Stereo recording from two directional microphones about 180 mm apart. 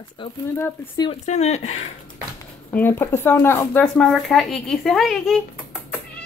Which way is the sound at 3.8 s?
5° left (ahead or behind).